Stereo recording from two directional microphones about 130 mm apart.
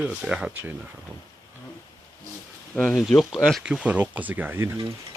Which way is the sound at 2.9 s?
Centre (ahead or behind).